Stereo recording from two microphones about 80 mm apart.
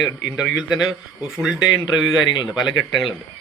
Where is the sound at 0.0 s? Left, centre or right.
Centre.